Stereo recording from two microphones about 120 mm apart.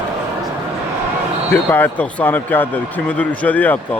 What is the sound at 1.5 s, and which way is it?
Speech, 15° left (ahead or behind).